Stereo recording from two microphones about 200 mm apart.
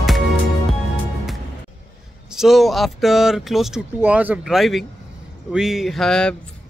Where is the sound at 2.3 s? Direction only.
Centre (ahead or behind).